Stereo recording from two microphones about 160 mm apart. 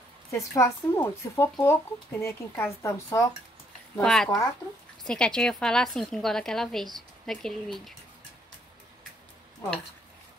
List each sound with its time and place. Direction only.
0.3 s speech: 20° left (ahead or behind)
3.9 s a woman's voice: 5° left (ahead or behind)